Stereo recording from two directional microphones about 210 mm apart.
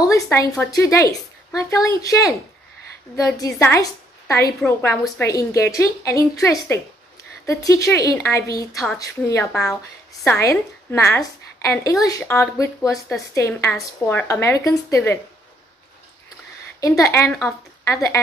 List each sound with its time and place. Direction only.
0.1 s a woman's voice: 15° left (ahead or behind)
3.3 s a woman's voice: 15° left (ahead or behind)
16.8 s a woman's voice: 15° left (ahead or behind)